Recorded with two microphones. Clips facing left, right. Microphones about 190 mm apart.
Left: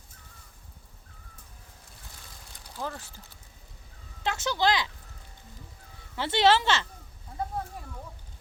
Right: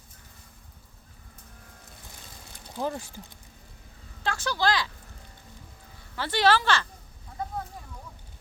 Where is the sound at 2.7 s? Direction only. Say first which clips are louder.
Right 6 dB; 15° right (ahead or behind).